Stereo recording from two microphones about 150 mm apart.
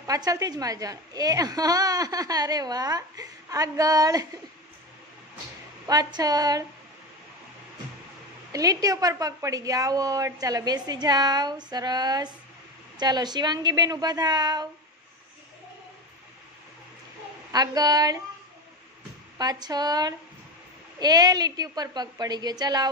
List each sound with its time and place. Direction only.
0.0 s a woman's voice: 25° right (ahead or behind)
5.9 s a woman's voice: 25° right (ahead or behind)
8.5 s a woman's voice: 25° right (ahead or behind)
17.5 s a woman's voice: 25° right (ahead or behind)
19.3 s a woman's voice: 25° right (ahead or behind)